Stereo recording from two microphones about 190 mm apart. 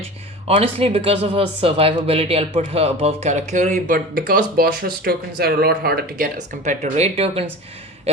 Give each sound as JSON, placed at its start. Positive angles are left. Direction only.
{"t": 0.4, "sound": "speech", "side_deg": -30}